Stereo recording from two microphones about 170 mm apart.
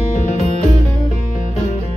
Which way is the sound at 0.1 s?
40° left (ahead or behind).